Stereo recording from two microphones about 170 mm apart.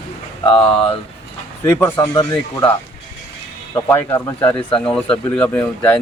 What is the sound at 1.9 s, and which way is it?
Speech, 20° left (ahead or behind).